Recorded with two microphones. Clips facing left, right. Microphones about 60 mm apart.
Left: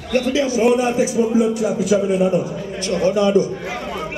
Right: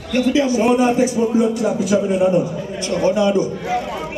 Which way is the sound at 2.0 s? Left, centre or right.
Centre.